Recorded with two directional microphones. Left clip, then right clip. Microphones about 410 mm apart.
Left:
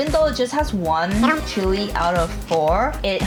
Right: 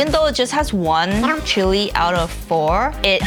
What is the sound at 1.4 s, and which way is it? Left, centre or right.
Speech, right.